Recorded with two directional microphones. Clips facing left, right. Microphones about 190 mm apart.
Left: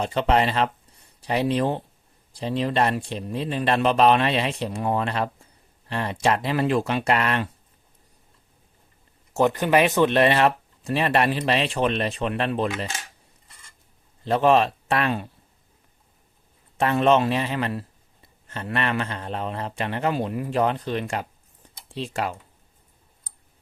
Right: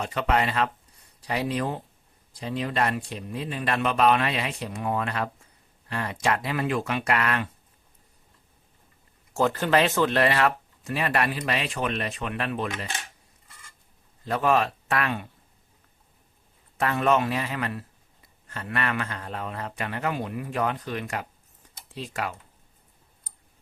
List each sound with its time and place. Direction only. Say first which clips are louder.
0.0 s a man's voice: left 4 dB; 30° left (ahead or behind)
9.3 s a man's voice: left 3 dB; 20° left (ahead or behind)
14.3 s a man's voice: left 5 dB; 25° left (ahead or behind)
16.7 s a man's voice: left 4 dB; 25° left (ahead or behind)